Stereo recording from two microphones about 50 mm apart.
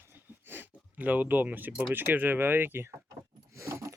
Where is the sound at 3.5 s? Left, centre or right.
Right.